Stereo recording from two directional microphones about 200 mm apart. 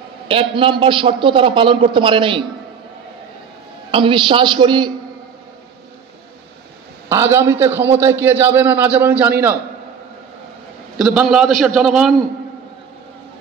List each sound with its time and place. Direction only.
0.3 s a man's voice: 25° right (ahead or behind)
3.9 s a man's voice: 25° right (ahead or behind)
7.1 s a man's voice: 15° right (ahead or behind)
11.0 s a man's voice: centre (ahead or behind)